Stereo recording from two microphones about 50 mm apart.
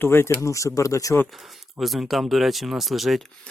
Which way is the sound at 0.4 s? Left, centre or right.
Left.